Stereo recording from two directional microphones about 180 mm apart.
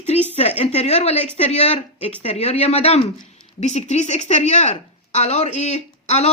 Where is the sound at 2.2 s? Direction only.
35° left (ahead or behind).